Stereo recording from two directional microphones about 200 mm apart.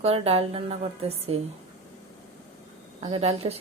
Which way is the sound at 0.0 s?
30° right (ahead or behind).